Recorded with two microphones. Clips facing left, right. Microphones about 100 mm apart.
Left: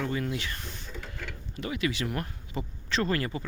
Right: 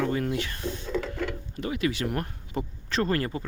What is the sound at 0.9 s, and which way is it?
Printer, 90° right.